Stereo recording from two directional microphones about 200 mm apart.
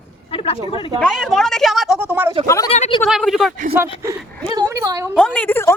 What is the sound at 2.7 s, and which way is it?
Speech, 35° left (ahead or behind).